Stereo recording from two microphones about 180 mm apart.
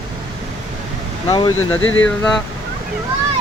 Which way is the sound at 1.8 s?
90° left.